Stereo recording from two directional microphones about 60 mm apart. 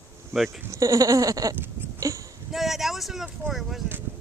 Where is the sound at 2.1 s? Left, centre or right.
Right.